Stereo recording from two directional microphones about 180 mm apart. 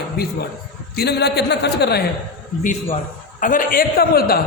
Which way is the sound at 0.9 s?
65° left (ahead or behind).